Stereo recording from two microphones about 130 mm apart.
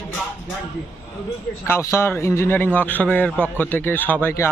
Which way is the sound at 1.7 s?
20° left (ahead or behind).